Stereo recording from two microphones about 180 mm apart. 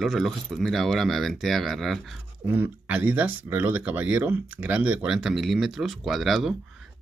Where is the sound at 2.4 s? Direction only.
10° right (ahead or behind).